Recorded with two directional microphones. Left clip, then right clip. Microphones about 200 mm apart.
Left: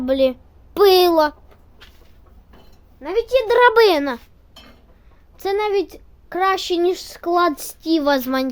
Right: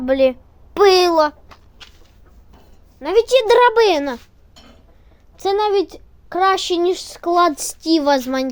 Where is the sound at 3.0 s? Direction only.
40° right (ahead or behind).